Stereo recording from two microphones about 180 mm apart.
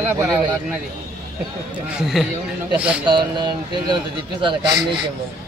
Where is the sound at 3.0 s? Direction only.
25° right (ahead or behind).